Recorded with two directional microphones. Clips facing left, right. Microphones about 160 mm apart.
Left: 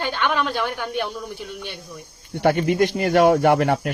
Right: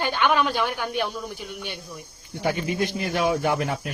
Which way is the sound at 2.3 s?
70° left (ahead or behind).